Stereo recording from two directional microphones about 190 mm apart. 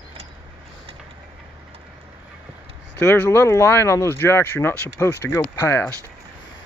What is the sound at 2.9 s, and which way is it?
Speech, 10° left (ahead or behind).